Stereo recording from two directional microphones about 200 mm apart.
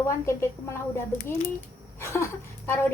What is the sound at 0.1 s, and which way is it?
Speech, 15° left (ahead or behind).